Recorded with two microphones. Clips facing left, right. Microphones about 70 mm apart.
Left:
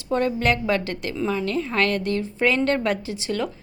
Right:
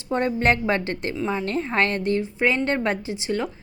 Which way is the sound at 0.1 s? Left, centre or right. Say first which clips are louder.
Even; right.